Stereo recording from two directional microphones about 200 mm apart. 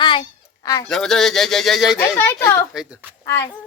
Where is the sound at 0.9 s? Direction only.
Centre (ahead or behind).